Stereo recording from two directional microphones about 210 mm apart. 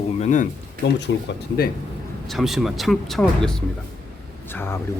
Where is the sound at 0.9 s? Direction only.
55° left (ahead or behind).